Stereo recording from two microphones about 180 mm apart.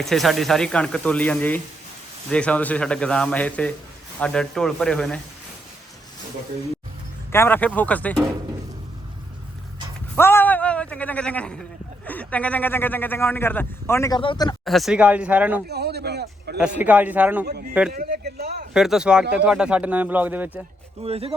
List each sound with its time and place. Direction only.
0.0 s speech: centre (ahead or behind)
7.3 s speech: 10° left (ahead or behind)
10.2 s a sound: 15° left (ahead or behind)
12.0 s speech: 10° left (ahead or behind); by 14.5 s 25° left (ahead or behind)
14.6 s speech: centre (ahead or behind)
15.7 s a sound: 65° right (ahead or behind)
16.6 s speech: 5° right (ahead or behind)
17.9 s a sound: 55° right (ahead or behind)
18.7 s speech: 5° right (ahead or behind)
21.0 s speech: 35° right (ahead or behind)